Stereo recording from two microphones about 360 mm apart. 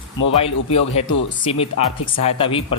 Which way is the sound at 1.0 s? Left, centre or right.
Centre.